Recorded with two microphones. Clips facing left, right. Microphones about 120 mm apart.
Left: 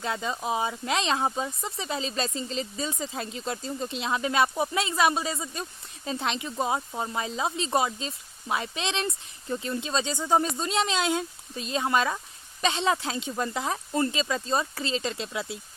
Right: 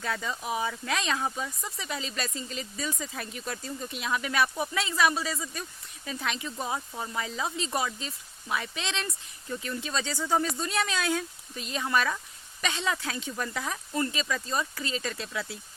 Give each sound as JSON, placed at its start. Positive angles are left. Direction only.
{"t": 0.0, "sound": "speech", "side_deg": 20}